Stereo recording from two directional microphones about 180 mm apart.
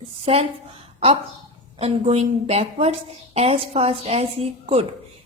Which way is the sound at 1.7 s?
35° right (ahead or behind).